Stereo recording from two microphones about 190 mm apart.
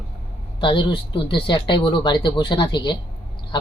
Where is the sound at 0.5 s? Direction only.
25° left (ahead or behind).